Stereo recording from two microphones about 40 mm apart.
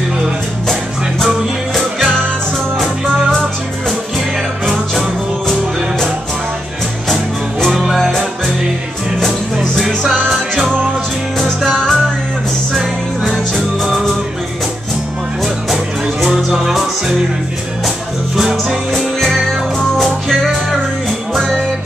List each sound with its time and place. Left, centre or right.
1.2 s music: centre
7.6 s music: centre
9.2 s music: centre
11.7 s music: centre
13.8 s music: centre
15.4 s music: centre
17.8 s music: centre
18.9 s music: centre